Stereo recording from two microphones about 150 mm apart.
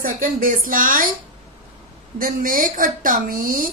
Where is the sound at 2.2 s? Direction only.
65° right (ahead or behind).